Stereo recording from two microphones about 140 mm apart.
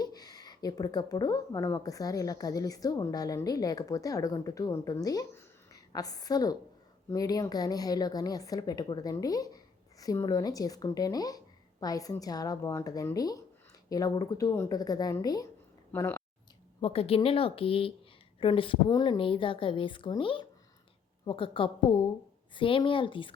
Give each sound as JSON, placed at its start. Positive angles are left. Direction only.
{"t": 0.0, "sound": "a woman's voice", "side_deg": 30}
{"t": 15.9, "sound": "speech", "side_deg": 15}
{"t": 16.8, "sound": "a woman's voice", "side_deg": 45}